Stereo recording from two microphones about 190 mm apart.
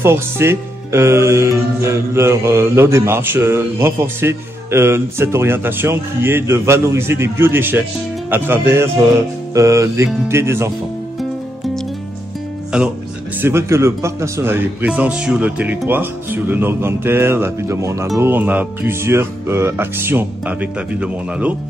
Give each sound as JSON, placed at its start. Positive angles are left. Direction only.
{"t": 0.0, "sound": "speech", "side_deg": -15}
{"t": 11.1, "sound": "music", "side_deg": 0}
{"t": 12.7, "sound": "speech", "side_deg": -5}